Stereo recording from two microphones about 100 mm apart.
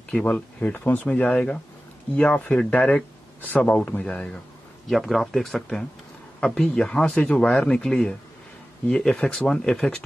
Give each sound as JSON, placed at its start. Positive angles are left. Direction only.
{"t": 0.1, "sound": "speech", "side_deg": 10}
{"t": 4.8, "sound": "speech", "side_deg": 0}